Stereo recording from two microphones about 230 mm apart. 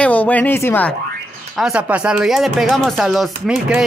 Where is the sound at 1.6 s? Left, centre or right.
Centre.